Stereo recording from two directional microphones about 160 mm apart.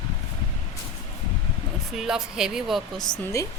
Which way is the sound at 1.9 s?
5° right (ahead or behind).